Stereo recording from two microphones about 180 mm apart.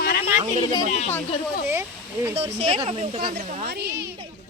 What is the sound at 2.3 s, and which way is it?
Speech, 35° right (ahead or behind).